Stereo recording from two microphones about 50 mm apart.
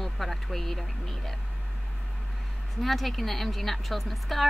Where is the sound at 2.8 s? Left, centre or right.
Centre.